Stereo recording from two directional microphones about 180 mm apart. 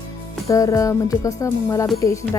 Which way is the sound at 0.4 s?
15° left (ahead or behind).